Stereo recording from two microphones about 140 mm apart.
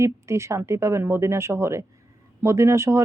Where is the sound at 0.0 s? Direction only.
20° right (ahead or behind).